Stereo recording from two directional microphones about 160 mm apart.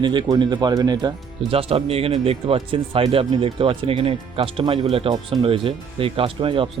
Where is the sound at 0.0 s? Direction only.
30° right (ahead or behind).